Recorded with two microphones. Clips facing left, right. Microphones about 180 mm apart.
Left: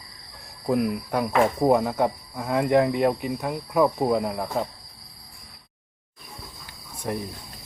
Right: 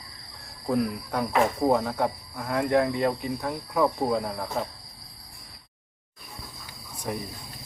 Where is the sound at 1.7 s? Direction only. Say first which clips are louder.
Left 3 dB; 15° left (ahead or behind).